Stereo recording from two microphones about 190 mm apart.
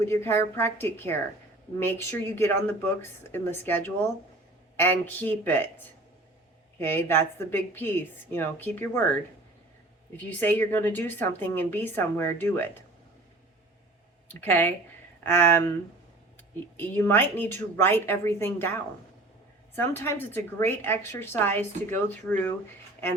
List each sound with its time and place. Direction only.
0.0 s a woman's voice: 15° left (ahead or behind)
6.7 s a woman's voice: 10° left (ahead or behind)
10.4 s a woman's voice: 10° left (ahead or behind)
14.4 s a woman's voice: 10° left (ahead or behind)